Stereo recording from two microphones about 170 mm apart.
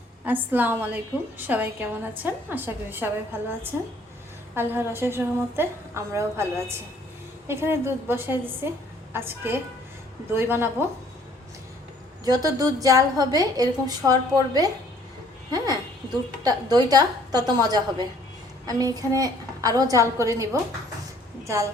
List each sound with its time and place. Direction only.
0.3 s a woman's voice: 10° right (ahead or behind)
12.2 s a woman's voice: 20° right (ahead or behind)